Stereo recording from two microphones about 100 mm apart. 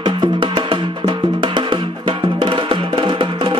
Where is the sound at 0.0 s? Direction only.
50° right (ahead or behind).